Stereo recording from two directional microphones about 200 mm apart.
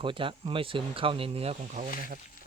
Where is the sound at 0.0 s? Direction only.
25° right (ahead or behind).